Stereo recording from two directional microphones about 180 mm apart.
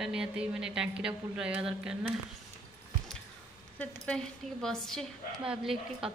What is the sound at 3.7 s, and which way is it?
A woman's voice, 10° left (ahead or behind).